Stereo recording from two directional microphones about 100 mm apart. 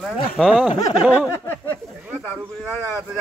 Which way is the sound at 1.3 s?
20° left (ahead or behind).